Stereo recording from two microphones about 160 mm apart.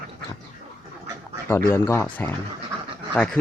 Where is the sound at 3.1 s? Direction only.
5° left (ahead or behind).